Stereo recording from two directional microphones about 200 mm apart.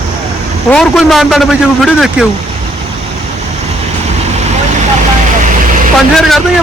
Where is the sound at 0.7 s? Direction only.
Centre (ahead or behind).